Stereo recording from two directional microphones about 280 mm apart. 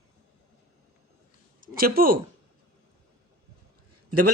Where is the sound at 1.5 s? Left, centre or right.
Right.